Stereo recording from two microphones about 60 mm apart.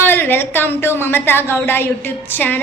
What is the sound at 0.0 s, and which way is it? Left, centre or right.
A woman's voice, left.